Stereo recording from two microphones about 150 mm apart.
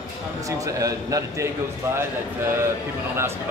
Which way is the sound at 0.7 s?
20° right (ahead or behind).